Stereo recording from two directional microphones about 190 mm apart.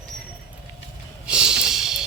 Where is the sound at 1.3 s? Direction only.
5° right (ahead or behind).